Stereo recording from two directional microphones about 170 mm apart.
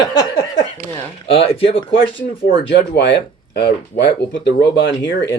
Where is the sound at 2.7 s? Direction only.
90° left.